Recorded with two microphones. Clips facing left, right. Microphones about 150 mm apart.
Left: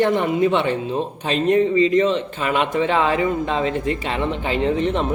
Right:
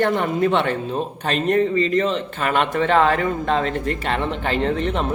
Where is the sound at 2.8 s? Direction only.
55° right (ahead or behind).